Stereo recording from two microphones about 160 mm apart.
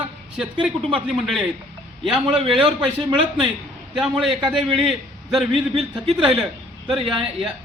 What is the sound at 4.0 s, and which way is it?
A man's voice, centre (ahead or behind).